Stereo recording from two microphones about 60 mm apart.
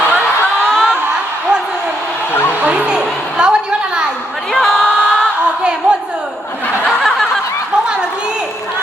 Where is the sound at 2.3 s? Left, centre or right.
Left.